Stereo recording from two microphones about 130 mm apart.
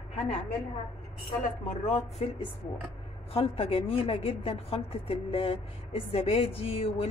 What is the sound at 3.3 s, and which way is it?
A woman's voice, 45° left (ahead or behind).